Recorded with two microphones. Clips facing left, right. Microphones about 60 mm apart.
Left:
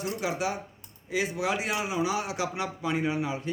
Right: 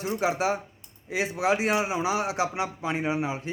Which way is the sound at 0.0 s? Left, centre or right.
Right.